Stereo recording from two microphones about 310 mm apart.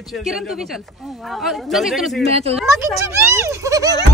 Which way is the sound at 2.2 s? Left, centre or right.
Centre.